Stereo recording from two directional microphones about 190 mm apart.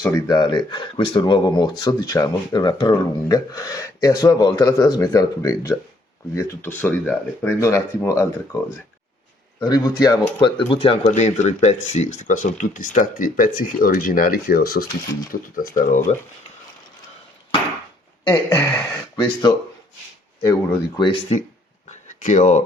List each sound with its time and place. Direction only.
0.0 s speech: 20° left (ahead or behind)
9.6 s speech: 20° left (ahead or behind); by 16.0 s 45° left (ahead or behind)
18.3 s speech: 15° left (ahead or behind)
21.8 s a sound: 40° left (ahead or behind)